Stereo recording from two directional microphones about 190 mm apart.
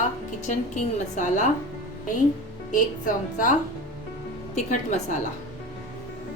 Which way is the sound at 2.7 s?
45° left (ahead or behind).